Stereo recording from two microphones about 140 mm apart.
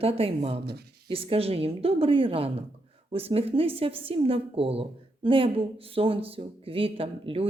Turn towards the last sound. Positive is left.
turn(degrees=-40)  # may be behind; listen again after turning